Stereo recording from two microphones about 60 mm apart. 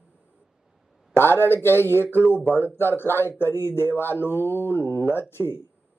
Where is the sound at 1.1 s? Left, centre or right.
Left.